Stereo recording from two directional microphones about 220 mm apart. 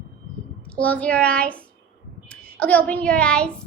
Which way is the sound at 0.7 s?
5° left (ahead or behind).